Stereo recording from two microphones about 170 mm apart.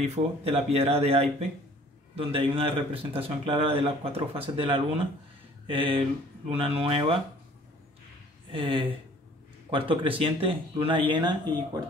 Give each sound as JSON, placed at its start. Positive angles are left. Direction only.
{"t": 0.0, "sound": "speech", "side_deg": -40}
{"t": 8.5, "sound": "speech", "side_deg": -30}